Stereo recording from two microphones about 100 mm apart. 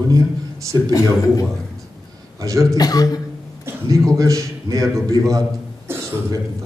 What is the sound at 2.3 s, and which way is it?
Speech, 35° right (ahead or behind).